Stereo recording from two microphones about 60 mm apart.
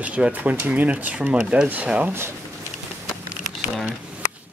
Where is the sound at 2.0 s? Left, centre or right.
Right.